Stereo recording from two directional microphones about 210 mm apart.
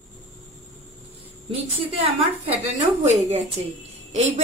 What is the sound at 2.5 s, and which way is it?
A woman's voice, 30° right (ahead or behind).